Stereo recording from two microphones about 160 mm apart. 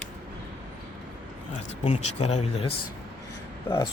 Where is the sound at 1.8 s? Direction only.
40° left (ahead or behind).